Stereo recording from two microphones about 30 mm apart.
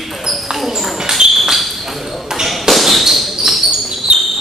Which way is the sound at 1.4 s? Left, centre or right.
Centre.